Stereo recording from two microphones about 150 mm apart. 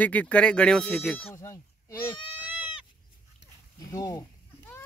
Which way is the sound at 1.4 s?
20° left (ahead or behind).